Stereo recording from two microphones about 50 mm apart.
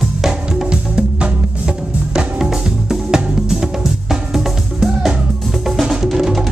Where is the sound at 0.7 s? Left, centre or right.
Right.